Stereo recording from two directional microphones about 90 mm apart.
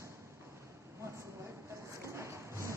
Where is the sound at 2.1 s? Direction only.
30° right (ahead or behind).